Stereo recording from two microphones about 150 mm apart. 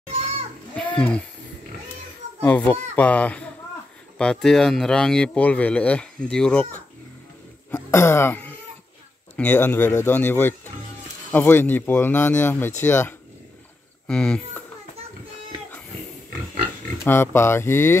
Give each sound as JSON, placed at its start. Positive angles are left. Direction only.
{"t": 0.7, "sound": "a sound", "side_deg": 10}
{"t": 2.4, "sound": "speech", "side_deg": 10}
{"t": 7.7, "sound": "cough", "side_deg": 15}
{"t": 9.4, "sound": "speech", "side_deg": 10}
{"t": 14.0, "sound": "speech", "side_deg": 5}
{"t": 17.0, "sound": "speech", "side_deg": 15}